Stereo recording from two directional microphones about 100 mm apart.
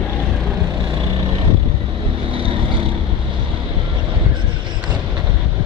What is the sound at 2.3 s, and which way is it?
Vehicle, 60° right (ahead or behind).